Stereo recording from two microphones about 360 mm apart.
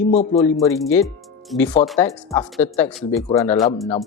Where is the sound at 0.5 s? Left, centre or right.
Centre.